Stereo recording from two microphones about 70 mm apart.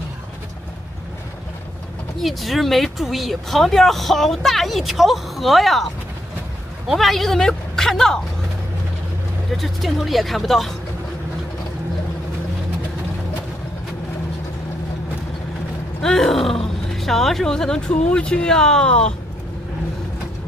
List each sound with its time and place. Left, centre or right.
2.2 s speech: centre
6.9 s speech: centre
9.6 s speech: centre
16.0 s speech: centre